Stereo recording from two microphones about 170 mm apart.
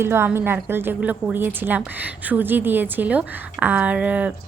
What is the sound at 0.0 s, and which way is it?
A woman's voice, 15° right (ahead or behind).